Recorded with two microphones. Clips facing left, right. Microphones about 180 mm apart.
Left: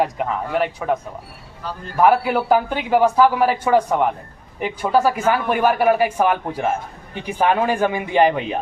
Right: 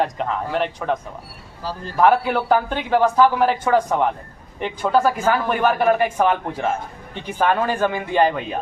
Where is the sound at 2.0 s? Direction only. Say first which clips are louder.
Left 1 dB; 10° left (ahead or behind).